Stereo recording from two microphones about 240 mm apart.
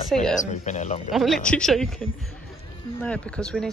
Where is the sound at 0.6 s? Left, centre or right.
Left.